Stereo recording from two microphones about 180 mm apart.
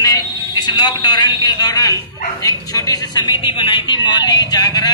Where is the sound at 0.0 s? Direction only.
25° left (ahead or behind).